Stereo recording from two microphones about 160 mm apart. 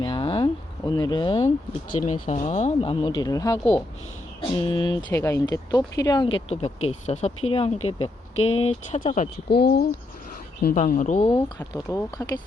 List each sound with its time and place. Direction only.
0.0 s a sound: 30° left (ahead or behind)
2.2 s speech: 50° left (ahead or behind)
2.7 s speech: 35° left (ahead or behind)
4.4 s speech: 30° left (ahead or behind)
5.0 s speech: 20° left (ahead or behind); by 9.3 s 50° left (ahead or behind)
9.5 s speech: 90° left
10.8 s speech: 50° left (ahead or behind)
11.7 s speech: 20° left (ahead or behind)